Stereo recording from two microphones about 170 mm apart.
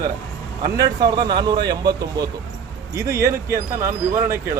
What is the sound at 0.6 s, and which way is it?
Speech, 20° right (ahead or behind).